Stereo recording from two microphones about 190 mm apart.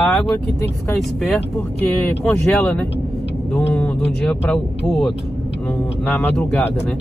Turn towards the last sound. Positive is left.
turn(degrees=5)  # may be behind; listen again after turning